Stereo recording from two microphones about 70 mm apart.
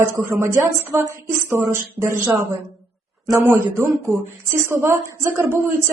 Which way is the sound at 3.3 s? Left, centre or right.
Right.